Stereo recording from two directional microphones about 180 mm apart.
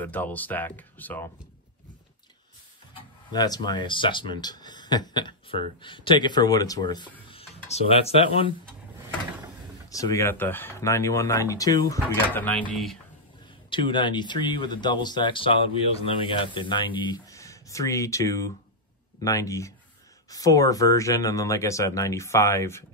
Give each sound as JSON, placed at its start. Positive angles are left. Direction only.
{"t": 0.0, "sound": "speech", "side_deg": 10}
{"t": 3.3, "sound": "speech", "side_deg": 20}
{"t": 9.8, "sound": "speech", "side_deg": 20}
{"t": 12.4, "sound": "speech", "side_deg": 10}
{"t": 13.7, "sound": "speech", "side_deg": 25}